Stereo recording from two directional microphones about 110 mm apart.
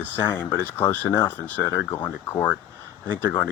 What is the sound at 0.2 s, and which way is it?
Speech, 20° left (ahead or behind).